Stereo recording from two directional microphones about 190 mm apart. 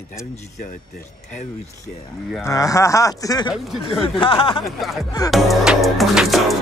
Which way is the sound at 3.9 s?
30° left (ahead or behind).